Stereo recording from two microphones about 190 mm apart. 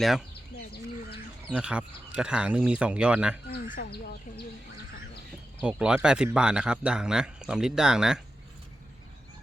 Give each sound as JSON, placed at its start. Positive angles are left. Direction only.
{"t": 0.0, "sound": "a man's voice", "side_deg": 0}
{"t": 1.5, "sound": "a man's voice", "side_deg": -5}
{"t": 3.5, "sound": "speech", "side_deg": 50}
{"t": 5.5, "sound": "a man's voice", "side_deg": -5}